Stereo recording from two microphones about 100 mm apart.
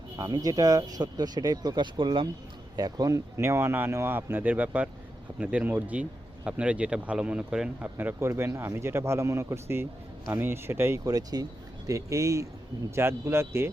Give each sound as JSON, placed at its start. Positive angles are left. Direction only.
{"t": 0.2, "sound": "speech", "side_deg": -40}
{"t": 2.7, "sound": "speech", "side_deg": -40}
{"t": 3.3, "sound": "speech", "side_deg": -30}
{"t": 7.9, "sound": "speech", "side_deg": -25}
{"t": 11.0, "sound": "speech", "side_deg": -40}